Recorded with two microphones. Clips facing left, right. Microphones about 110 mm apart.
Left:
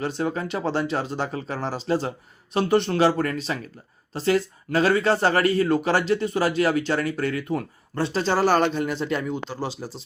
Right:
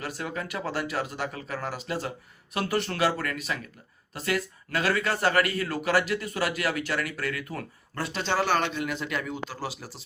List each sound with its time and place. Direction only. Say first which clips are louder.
0.0 s a man's voice: left 7 dB; 30° left (ahead or behind)
8.1 s a man's voice: left 5 dB; 40° left (ahead or behind)